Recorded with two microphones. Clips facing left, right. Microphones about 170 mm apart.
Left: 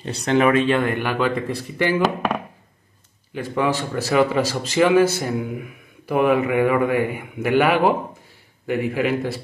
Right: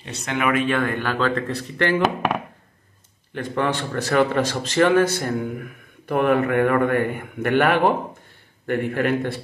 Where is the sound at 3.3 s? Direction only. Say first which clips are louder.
Left 2 dB; 5° left (ahead or behind).